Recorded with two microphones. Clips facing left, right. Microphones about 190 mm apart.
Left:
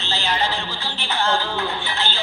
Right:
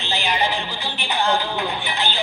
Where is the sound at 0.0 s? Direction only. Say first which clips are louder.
Right 1 dB; 15° right (ahead or behind).